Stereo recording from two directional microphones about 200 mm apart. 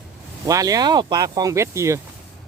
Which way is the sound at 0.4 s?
15° right (ahead or behind).